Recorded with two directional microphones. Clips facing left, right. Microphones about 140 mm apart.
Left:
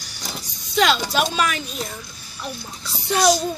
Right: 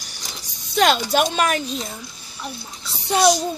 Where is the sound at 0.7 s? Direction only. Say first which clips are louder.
Right 2 dB; 50° right (ahead or behind).